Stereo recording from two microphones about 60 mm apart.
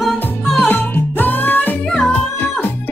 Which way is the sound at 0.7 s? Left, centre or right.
Left.